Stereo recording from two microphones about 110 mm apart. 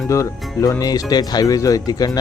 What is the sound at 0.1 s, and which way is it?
Speech, 30° left (ahead or behind).